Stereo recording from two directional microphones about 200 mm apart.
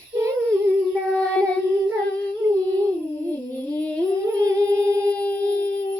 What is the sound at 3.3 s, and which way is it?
Humming, 10° left (ahead or behind).